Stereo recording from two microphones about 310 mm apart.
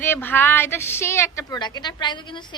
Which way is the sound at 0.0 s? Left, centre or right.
Centre.